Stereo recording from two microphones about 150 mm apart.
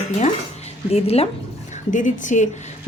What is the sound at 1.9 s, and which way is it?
Speech, 60° left (ahead or behind).